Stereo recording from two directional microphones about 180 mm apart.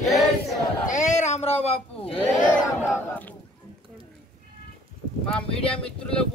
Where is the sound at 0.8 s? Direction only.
40° left (ahead or behind).